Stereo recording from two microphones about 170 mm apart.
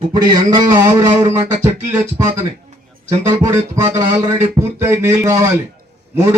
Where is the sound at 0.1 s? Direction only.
25° right (ahead or behind).